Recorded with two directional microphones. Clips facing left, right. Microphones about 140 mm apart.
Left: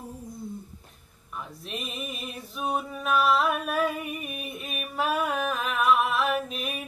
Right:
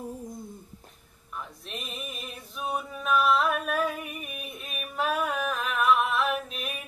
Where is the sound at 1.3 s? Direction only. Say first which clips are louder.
Left 2 dB; 5° left (ahead or behind).